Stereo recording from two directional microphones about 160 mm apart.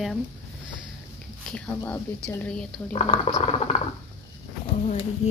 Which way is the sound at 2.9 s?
40° left (ahead or behind).